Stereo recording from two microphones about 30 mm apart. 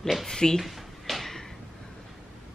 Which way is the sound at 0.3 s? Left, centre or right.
Left.